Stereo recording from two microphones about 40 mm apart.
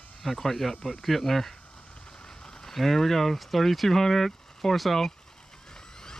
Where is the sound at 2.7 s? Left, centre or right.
Centre.